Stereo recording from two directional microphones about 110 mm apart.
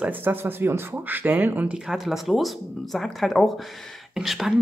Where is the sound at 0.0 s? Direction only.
15° right (ahead or behind).